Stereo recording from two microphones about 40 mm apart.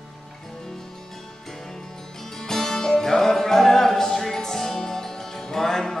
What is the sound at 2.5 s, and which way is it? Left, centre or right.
Music, centre.